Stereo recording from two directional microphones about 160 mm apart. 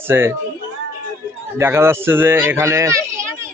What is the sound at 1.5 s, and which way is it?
Speech, 15° right (ahead or behind).